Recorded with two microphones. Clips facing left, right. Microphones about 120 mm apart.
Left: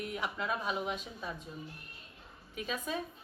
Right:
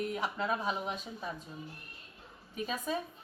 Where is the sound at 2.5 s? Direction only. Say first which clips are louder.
Right 2 dB; 35° right (ahead or behind).